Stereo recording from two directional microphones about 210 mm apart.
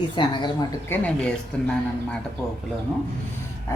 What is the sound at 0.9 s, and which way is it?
Speech, 10° left (ahead or behind).